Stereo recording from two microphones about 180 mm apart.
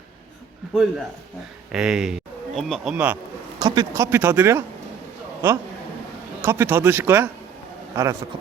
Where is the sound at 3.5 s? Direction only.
20° right (ahead or behind).